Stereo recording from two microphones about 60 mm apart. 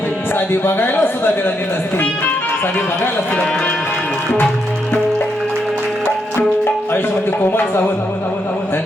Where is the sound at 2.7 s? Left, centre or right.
Left.